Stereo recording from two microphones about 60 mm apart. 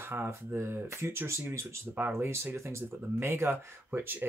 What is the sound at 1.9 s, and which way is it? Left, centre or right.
Speech, right.